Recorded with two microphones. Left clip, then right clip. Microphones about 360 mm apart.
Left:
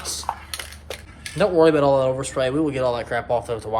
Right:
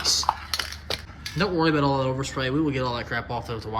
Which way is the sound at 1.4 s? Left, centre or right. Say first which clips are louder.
Left 7 dB; centre.